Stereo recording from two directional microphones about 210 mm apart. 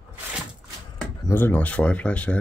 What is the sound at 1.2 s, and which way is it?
Speech, 10° left (ahead or behind).